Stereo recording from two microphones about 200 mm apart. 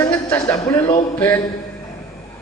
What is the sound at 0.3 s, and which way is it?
A man's voice, 15° left (ahead or behind).